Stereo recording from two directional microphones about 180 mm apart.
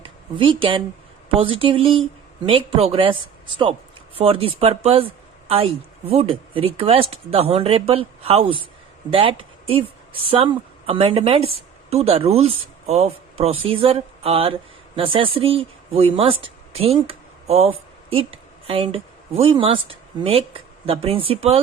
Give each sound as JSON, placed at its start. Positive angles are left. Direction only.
{"t": 0.0, "sound": "speech", "side_deg": -30}